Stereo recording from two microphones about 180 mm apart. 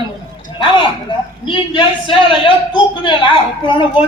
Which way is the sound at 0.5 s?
25° left (ahead or behind).